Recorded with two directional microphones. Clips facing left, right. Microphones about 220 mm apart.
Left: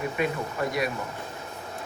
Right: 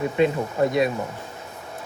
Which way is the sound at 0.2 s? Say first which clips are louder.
Right 8 dB; 25° right (ahead or behind).